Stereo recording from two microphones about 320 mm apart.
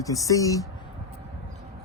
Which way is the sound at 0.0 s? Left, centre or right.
Centre.